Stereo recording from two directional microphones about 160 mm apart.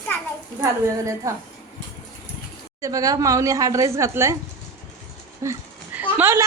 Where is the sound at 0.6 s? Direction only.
20° right (ahead or behind).